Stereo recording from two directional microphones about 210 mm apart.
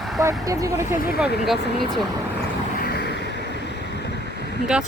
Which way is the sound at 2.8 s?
50° left (ahead or behind).